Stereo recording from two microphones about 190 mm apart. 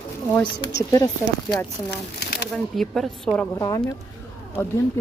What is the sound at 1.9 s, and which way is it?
Speech, 60° left (ahead or behind).